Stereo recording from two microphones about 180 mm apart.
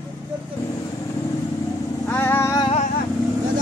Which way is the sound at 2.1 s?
10° left (ahead or behind).